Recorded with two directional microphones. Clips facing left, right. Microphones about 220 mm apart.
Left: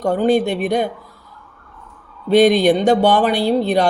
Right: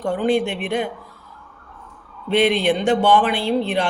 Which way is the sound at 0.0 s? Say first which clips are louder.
Left 4 dB; 40° left (ahead or behind).